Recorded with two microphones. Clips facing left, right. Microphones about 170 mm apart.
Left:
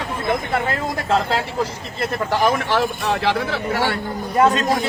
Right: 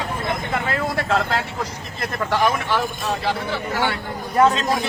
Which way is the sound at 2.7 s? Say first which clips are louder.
Left 3 dB; 75° left (ahead or behind).